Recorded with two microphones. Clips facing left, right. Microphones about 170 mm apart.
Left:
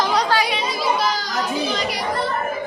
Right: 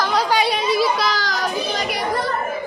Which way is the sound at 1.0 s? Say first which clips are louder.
Right 1 dB; 85° right.